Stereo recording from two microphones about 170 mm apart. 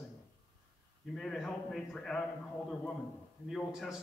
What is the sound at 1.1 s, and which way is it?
A man's voice, 5° left (ahead or behind).